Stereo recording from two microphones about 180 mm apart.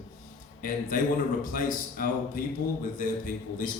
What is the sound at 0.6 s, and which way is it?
A man's voice, 50° left (ahead or behind).